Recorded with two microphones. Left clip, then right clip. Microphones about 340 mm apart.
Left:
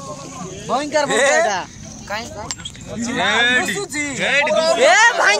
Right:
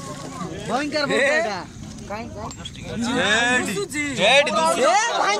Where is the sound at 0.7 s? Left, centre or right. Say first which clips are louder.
Left 4 dB; centre.